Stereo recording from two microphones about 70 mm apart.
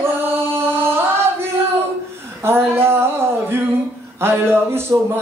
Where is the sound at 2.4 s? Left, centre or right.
Right.